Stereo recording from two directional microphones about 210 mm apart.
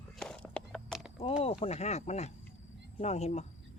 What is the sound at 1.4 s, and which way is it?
Speech, 30° left (ahead or behind).